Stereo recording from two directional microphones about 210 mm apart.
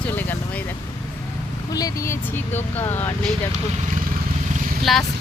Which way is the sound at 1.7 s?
15° left (ahead or behind).